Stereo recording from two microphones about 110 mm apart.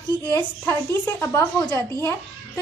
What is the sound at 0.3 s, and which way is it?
A woman's voice, 20° left (ahead or behind).